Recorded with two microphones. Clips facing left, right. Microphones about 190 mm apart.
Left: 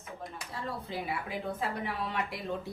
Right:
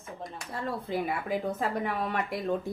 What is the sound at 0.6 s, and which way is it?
Speech, 55° right (ahead or behind).